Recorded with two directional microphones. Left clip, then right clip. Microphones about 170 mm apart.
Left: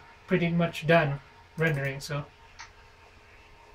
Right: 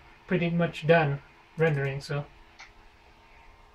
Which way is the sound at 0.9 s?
Centre (ahead or behind).